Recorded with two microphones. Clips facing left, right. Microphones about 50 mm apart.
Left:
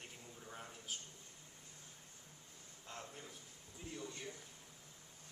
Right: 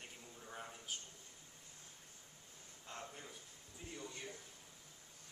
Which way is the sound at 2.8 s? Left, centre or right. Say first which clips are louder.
Right 1 dB; centre.